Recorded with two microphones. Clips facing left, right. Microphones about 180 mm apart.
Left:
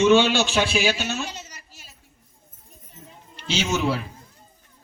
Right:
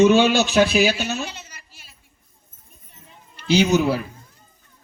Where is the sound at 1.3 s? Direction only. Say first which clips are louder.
Left 1 dB; 40° left (ahead or behind).